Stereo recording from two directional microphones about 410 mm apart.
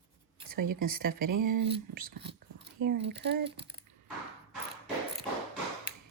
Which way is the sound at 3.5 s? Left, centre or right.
Centre.